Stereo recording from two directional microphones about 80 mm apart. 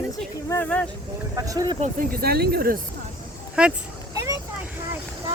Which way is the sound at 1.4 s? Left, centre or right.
Right.